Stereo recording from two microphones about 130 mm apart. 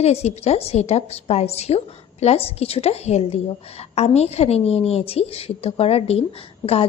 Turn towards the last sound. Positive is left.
turn(degrees=50)  # may be behind; listen again after turning